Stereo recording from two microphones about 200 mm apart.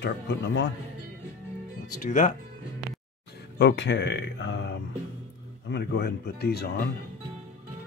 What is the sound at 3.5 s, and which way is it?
Speech, 60° left (ahead or behind).